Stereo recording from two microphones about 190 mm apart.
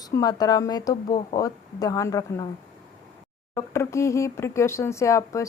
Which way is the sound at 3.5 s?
15° left (ahead or behind).